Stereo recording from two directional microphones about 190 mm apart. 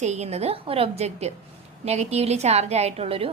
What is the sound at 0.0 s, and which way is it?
A woman's voice, 35° right (ahead or behind).